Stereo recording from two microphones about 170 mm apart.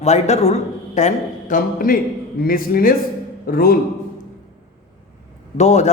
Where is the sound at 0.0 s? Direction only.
40° left (ahead or behind); by 3.8 s 60° left (ahead or behind).